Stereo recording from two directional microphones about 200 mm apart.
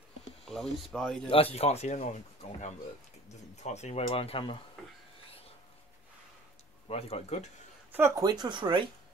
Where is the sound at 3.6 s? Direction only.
35° left (ahead or behind).